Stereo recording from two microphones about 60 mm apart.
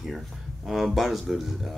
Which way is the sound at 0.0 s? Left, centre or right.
Centre.